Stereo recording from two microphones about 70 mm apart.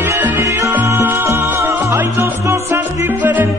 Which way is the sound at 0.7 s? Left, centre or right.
Right.